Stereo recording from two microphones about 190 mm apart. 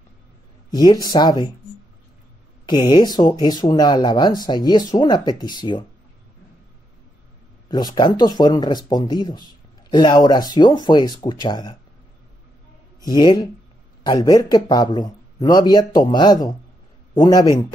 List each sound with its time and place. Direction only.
0.7 s speech: 20° left (ahead or behind)
2.6 s speech: 20° left (ahead or behind)
7.6 s speech: 20° left (ahead or behind)
13.0 s speech: 20° left (ahead or behind)